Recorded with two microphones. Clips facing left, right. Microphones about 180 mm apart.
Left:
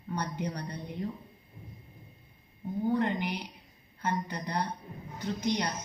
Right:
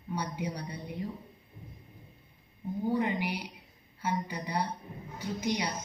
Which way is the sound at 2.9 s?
5° right (ahead or behind).